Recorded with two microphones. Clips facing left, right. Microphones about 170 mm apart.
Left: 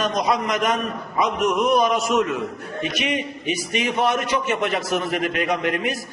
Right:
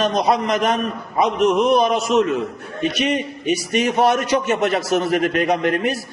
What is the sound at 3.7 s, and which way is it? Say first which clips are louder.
Mantra: right 4 dB; 40° right (ahead or behind).